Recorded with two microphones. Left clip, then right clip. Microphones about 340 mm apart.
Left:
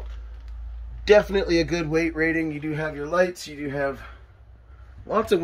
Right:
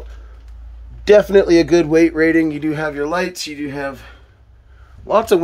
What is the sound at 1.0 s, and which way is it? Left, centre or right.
Speech, right.